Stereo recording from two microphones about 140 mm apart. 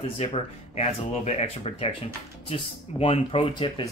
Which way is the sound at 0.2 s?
50° left (ahead or behind).